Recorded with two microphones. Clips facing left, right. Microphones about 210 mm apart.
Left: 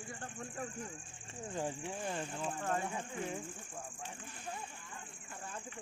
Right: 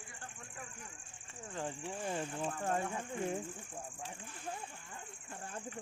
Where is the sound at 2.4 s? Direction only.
30° right (ahead or behind).